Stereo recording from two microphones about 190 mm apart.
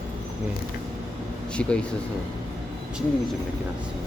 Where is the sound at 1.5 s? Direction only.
5° left (ahead or behind).